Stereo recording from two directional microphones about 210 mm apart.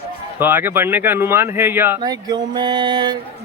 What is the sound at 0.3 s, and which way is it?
Speech, 10° right (ahead or behind).